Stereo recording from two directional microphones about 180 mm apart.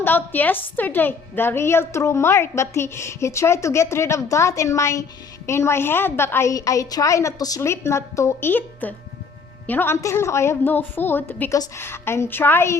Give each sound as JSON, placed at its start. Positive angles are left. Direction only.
{"t": 0.0, "sound": "a woman's voice", "side_deg": 10}